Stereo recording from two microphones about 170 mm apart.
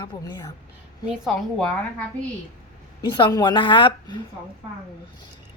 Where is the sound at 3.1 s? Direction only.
25° left (ahead or behind).